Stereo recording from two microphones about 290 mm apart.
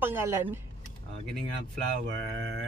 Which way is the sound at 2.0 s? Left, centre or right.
Right.